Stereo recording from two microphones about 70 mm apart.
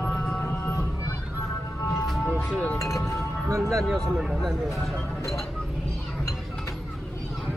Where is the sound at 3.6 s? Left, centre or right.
Centre.